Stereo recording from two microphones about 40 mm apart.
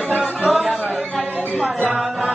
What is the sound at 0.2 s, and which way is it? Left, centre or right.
Chatter, centre.